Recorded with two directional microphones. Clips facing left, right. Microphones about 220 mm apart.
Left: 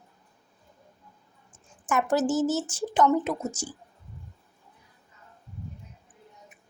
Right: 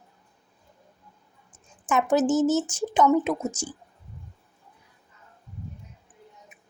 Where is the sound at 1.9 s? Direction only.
20° right (ahead or behind).